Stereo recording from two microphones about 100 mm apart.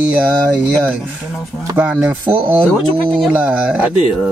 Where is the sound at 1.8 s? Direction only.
10° right (ahead or behind).